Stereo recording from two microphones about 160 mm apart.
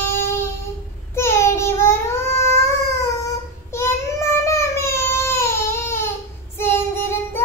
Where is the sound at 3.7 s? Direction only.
15° left (ahead or behind).